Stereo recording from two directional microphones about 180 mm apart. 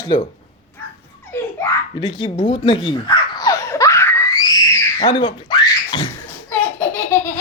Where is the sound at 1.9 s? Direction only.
25° left (ahead or behind).